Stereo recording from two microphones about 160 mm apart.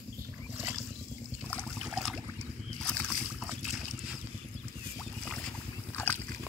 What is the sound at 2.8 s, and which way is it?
Boat, 5° left (ahead or behind).